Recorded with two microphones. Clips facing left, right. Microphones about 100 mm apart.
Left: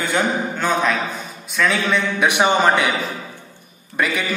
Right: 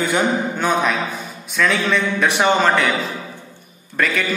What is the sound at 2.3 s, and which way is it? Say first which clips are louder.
A man's voice: left 1 dB; 15° left (ahead or behind).